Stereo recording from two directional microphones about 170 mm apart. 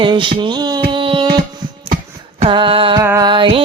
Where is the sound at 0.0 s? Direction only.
30° right (ahead or behind).